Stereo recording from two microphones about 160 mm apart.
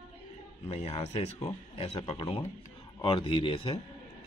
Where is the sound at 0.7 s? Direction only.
40° left (ahead or behind).